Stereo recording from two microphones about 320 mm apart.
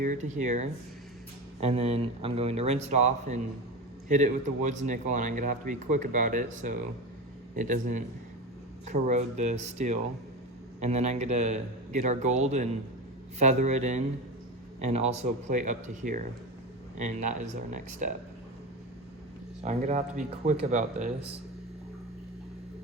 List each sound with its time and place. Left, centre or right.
0.0 s a man's voice: right
19.6 s speech: right